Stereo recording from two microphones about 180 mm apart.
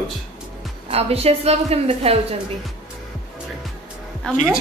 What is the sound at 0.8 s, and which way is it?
A woman's voice, 35° right (ahead or behind).